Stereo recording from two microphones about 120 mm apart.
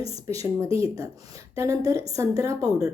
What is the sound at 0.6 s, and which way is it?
A woman's voice, 25° right (ahead or behind).